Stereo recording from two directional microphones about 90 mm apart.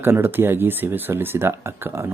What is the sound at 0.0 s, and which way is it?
Speech, 25° right (ahead or behind).